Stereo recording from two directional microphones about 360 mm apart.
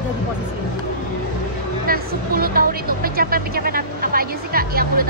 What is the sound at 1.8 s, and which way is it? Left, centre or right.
Speech, right.